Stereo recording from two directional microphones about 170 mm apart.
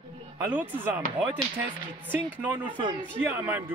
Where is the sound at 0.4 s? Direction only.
10° right (ahead or behind).